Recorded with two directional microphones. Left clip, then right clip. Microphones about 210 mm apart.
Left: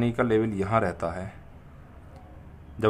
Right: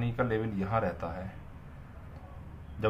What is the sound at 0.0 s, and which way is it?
Speech, 50° left (ahead or behind).